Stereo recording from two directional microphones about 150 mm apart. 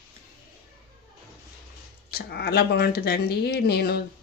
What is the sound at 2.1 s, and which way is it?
A woman's voice, 90° left.